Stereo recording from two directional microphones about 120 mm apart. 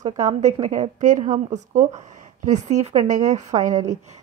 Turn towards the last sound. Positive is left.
turn(degrees=-30)  # may be behind; listen again after turning